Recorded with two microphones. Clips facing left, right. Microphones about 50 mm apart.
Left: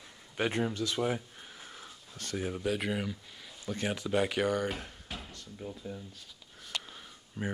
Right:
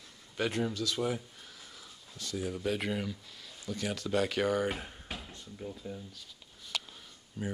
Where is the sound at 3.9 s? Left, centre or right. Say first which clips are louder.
Even; centre.